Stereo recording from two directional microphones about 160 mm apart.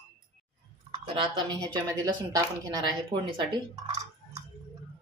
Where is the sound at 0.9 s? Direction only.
35° right (ahead or behind).